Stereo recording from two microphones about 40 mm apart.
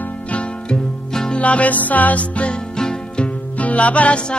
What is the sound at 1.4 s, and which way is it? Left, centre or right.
Music, left.